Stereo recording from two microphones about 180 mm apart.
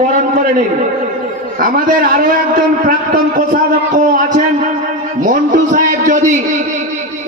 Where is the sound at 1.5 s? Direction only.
50° right (ahead or behind).